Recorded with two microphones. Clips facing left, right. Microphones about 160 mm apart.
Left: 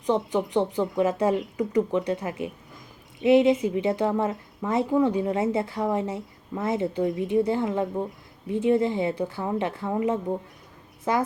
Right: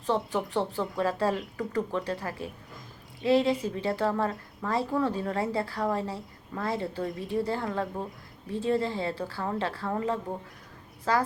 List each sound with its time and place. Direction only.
0.0 s a woman's voice: 20° left (ahead or behind)